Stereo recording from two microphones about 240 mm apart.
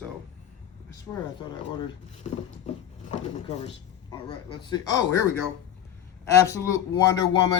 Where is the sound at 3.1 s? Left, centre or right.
Left.